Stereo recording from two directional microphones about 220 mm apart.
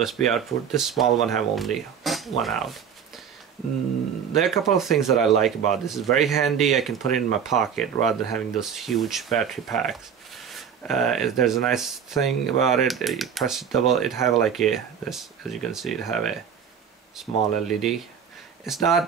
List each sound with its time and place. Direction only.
0.0 s speech: centre (ahead or behind)
4.4 s speech: centre (ahead or behind)